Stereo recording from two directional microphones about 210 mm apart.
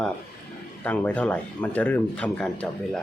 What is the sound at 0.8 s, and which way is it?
Speech, 10° left (ahead or behind).